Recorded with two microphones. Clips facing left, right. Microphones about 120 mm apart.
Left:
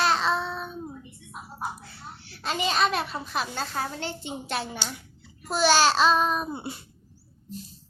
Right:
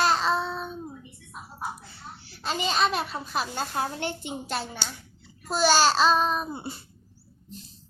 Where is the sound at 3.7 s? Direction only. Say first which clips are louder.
Right 3 dB; 15° right (ahead or behind).